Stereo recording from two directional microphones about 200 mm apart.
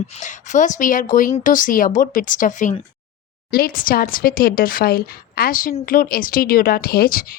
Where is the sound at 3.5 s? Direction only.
50° left (ahead or behind).